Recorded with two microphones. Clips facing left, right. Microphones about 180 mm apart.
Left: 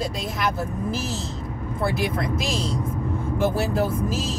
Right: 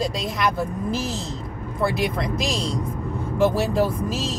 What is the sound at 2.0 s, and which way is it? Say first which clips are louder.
Speech: right 1 dB; centre (ahead or behind).